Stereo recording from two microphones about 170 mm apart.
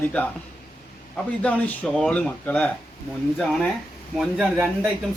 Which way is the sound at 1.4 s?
5° left (ahead or behind).